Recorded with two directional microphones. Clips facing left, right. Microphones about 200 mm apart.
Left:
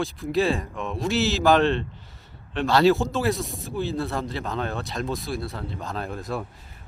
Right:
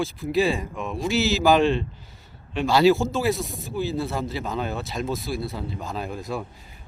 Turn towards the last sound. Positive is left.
turn(degrees=0)  # may be behind; listen again after turning